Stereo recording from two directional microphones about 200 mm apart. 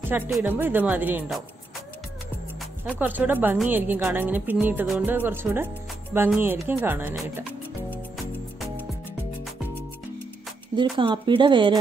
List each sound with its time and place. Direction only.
0.1 s speech: 10° right (ahead or behind)
2.8 s speech: 10° right (ahead or behind)
8.5 s music: 10° right (ahead or behind)
10.8 s speech: 25° right (ahead or behind)